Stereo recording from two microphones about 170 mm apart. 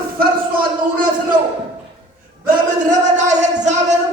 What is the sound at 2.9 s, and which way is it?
Speech, 45° right (ahead or behind).